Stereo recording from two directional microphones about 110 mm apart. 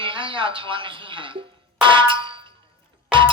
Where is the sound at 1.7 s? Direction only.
50° right (ahead or behind).